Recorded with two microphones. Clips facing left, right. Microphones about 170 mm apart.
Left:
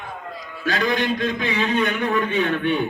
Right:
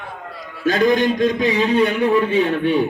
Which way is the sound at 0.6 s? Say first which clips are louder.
Right 7 dB; 45° right (ahead or behind).